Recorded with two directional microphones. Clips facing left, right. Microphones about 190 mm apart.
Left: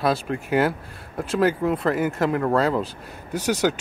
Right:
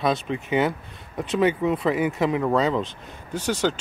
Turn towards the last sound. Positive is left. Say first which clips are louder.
# left 2 dB
turn(degrees=10)  # may be behind; listen again after turning